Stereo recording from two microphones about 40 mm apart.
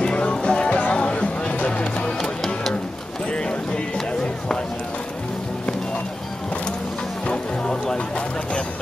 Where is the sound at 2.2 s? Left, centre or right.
Centre.